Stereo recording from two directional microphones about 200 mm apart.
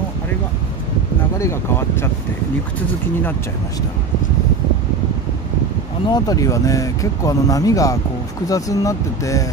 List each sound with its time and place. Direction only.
1.4 s speech: 10° left (ahead or behind)
6.0 s speech: 20° left (ahead or behind)